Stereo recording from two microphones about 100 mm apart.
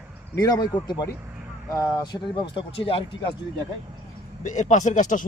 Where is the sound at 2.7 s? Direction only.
65° left (ahead or behind).